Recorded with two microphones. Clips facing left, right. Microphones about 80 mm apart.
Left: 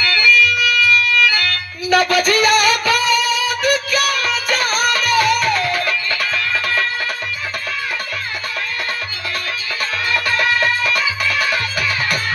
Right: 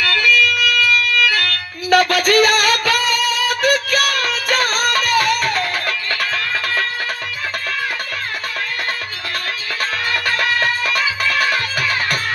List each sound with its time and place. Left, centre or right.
0.1 s music: right
10.1 s music: right